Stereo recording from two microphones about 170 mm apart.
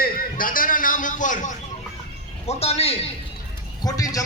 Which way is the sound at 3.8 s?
20° left (ahead or behind).